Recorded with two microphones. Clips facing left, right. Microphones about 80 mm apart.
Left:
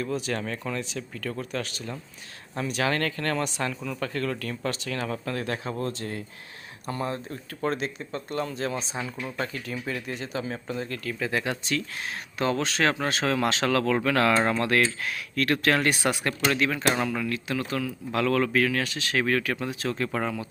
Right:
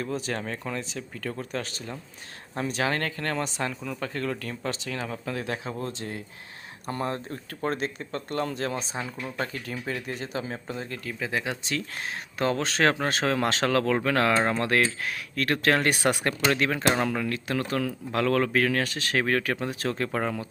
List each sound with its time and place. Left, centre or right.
0.0 s speech: right
6.8 s speech: right; by 11.7 s centre
12.4 s speech: right